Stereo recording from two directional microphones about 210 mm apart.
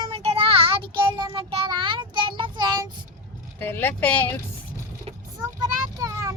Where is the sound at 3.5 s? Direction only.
10° left (ahead or behind).